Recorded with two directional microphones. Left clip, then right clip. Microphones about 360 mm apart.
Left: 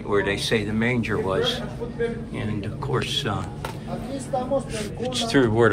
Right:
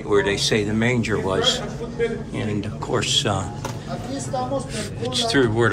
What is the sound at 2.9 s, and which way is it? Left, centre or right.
Speech, centre.